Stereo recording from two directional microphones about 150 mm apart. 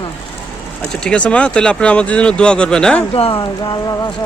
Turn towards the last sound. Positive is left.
turn(degrees=25)  # may be behind; listen again after turning